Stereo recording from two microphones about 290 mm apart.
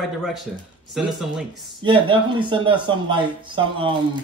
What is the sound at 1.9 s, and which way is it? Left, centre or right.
Speech, centre.